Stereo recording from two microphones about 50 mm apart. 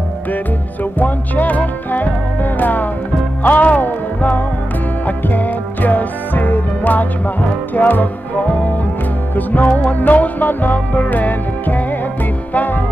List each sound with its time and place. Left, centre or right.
0.9 s music: left
9.3 s music: left